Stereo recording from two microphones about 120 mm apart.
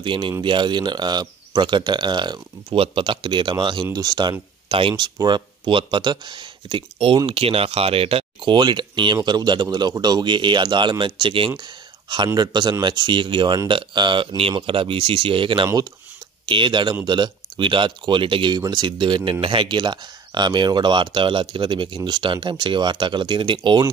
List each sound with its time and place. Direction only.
0.0 s speech: 45° right (ahead or behind)